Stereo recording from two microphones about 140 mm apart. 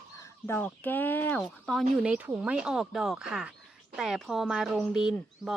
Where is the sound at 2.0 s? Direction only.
10° right (ahead or behind).